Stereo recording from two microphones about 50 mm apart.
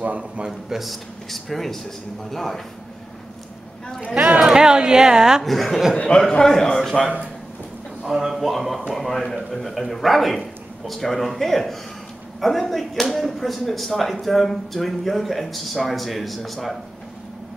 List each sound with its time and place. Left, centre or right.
0.0 s a man's voice: right
0.5 s a man's voice: centre
4.4 s speech: centre
5.4 s speech: centre
5.9 s a man's voice: centre
8.0 s speech: centre